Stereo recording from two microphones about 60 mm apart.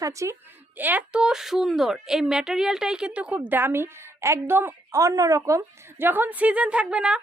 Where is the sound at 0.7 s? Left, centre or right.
Right.